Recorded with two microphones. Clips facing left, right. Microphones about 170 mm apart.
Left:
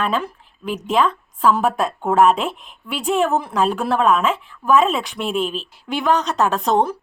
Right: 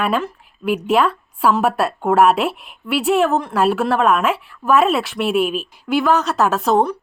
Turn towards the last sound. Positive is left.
turn(degrees=0)  # may be behind; listen again after turning